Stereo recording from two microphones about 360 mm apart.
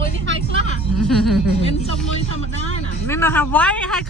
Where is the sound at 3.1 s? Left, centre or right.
Centre.